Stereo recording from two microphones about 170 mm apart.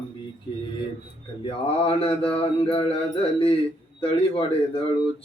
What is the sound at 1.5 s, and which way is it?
Mantra, 35° left (ahead or behind).